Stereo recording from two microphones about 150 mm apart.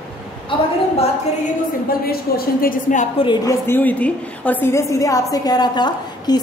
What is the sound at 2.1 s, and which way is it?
Speech, 90° left.